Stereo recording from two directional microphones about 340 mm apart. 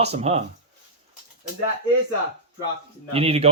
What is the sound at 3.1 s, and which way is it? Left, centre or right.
Speech, centre.